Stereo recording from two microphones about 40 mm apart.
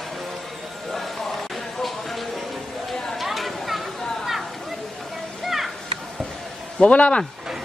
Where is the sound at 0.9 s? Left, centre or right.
Centre.